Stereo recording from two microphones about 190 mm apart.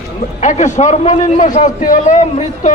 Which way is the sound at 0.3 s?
40° left (ahead or behind).